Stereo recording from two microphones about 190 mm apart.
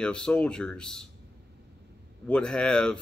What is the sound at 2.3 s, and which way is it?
Speech, 5° left (ahead or behind).